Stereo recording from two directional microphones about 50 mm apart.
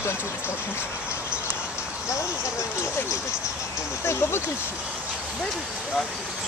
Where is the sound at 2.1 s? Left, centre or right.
Left.